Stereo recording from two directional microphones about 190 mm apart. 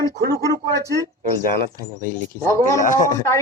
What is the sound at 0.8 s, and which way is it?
Speech, 15° right (ahead or behind).